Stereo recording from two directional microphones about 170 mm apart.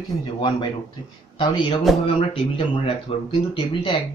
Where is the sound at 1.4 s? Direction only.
30° left (ahead or behind).